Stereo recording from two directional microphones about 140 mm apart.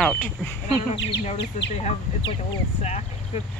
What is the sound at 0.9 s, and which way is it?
Speech, 50° left (ahead or behind).